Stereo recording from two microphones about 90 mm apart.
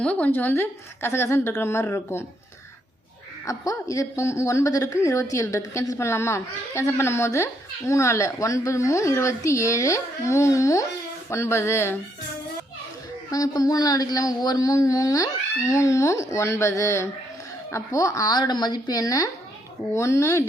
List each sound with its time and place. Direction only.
0.0 s a woman's voice: 15° left (ahead or behind)
3.4 s a woman's voice: 40° left (ahead or behind)
13.3 s a woman's voice: 40° left (ahead or behind)